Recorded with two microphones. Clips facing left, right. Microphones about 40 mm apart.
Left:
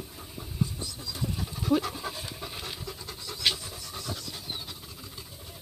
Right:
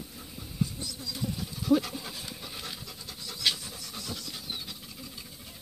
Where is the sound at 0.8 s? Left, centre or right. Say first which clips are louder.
Even; left.